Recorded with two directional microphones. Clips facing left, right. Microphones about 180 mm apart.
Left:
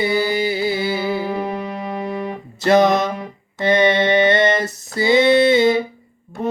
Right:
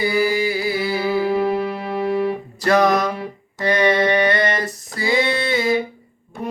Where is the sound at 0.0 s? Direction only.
25° left (ahead or behind).